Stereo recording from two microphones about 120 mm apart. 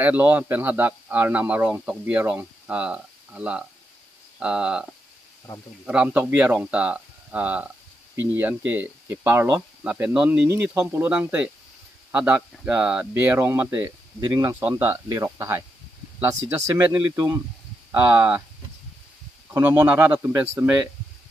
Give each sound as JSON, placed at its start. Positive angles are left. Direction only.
{"t": 0.0, "sound": "speech", "side_deg": -15}
{"t": 5.9, "sound": "speech", "side_deg": -10}
{"t": 14.2, "sound": "speech", "side_deg": -30}
{"t": 14.6, "sound": "speech", "side_deg": -15}
{"t": 15.0, "sound": "speech", "side_deg": -25}
{"t": 19.5, "sound": "speech", "side_deg": -20}